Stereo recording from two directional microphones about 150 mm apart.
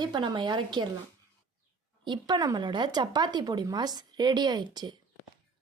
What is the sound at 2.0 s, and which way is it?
A woman's voice, 30° right (ahead or behind).